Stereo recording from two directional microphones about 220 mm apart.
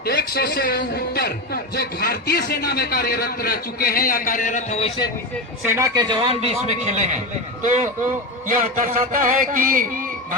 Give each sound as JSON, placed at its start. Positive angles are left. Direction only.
{"t": 0.0, "sound": "a man's voice", "side_deg": 45}
{"t": 5.6, "sound": "a man's voice", "side_deg": -10}
{"t": 7.6, "sound": "a sound", "side_deg": -35}